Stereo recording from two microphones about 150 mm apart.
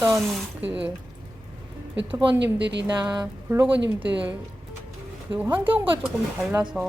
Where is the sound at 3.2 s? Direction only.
10° right (ahead or behind).